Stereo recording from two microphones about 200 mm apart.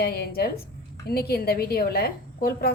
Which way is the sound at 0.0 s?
50° left (ahead or behind).